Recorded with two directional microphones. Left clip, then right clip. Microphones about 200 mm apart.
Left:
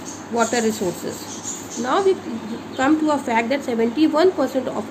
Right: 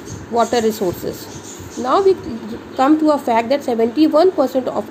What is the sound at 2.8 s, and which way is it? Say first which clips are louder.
A woman's voice: right 5 dB; 20° right (ahead or behind).